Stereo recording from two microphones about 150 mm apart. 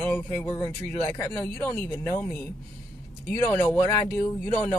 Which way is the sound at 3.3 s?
15° left (ahead or behind).